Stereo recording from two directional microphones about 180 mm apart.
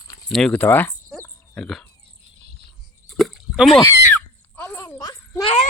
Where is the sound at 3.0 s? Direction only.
Centre (ahead or behind).